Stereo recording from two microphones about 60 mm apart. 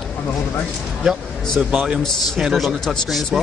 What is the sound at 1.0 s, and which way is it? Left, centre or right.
A man's voice, centre.